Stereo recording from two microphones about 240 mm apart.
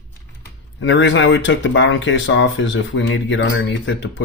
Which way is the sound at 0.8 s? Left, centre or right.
Left.